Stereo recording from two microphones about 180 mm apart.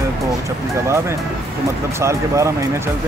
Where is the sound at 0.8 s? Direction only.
15° right (ahead or behind).